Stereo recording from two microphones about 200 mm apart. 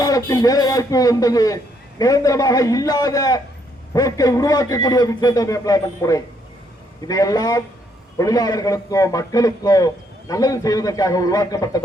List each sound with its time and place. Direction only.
0.0 s a man's voice: 20° left (ahead or behind)